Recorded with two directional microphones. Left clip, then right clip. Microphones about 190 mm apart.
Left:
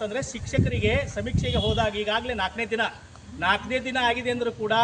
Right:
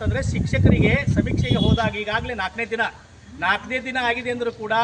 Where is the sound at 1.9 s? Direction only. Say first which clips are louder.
Right 1 dB; 20° left (ahead or behind).